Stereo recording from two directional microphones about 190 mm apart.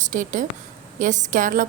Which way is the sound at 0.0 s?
45° right (ahead or behind).